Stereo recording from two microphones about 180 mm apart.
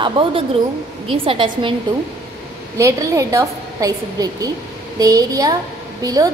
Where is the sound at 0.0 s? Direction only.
30° right (ahead or behind).